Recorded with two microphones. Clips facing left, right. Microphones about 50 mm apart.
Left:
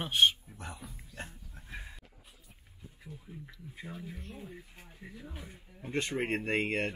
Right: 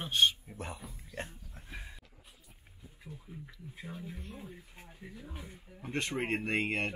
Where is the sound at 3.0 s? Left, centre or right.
Centre.